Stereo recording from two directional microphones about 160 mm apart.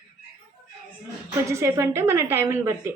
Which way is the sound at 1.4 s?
20° right (ahead or behind).